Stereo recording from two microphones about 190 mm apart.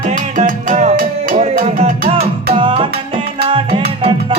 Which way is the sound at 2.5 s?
25° right (ahead or behind).